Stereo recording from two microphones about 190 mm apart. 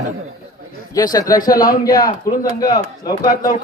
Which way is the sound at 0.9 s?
20° left (ahead or behind).